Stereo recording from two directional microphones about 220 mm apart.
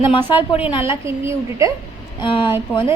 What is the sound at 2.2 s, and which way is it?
Speech, 20° left (ahead or behind).